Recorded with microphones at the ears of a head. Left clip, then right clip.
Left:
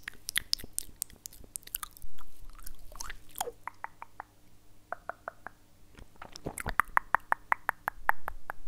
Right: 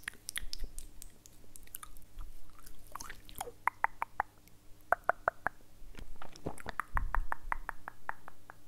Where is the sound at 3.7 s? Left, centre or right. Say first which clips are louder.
Right 9 dB; right.